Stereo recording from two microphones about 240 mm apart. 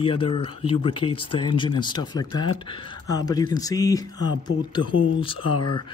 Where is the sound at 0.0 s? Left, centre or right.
Left.